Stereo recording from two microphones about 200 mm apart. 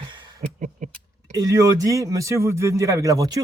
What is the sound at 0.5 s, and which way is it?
Mechanisms, 40° right (ahead or behind).